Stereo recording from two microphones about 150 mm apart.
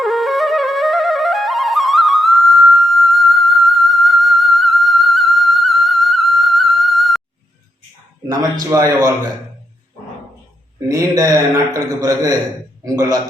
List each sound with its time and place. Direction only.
0.0 s flute: centre (ahead or behind)
8.7 s a man's voice: 20° right (ahead or behind)
10.8 s a man's voice: 25° right (ahead or behind)